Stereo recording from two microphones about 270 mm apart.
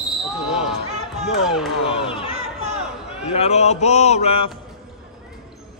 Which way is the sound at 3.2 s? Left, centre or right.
Left.